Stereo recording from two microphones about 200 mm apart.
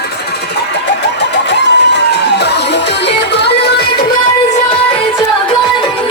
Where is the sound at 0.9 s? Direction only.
60° left (ahead or behind).